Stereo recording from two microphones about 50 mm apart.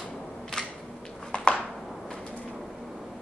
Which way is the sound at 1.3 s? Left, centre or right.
Left.